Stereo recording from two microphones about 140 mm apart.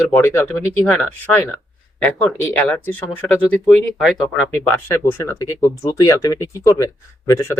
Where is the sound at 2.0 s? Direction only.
5° left (ahead or behind).